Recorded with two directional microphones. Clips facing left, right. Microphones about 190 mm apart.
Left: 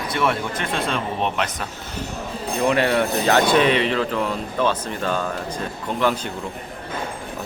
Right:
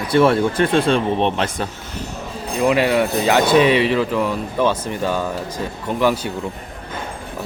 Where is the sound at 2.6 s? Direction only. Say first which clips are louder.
Right 3 dB; 10° right (ahead or behind).